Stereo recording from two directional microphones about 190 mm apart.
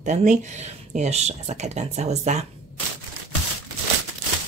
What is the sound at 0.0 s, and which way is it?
Speech, 40° right (ahead or behind).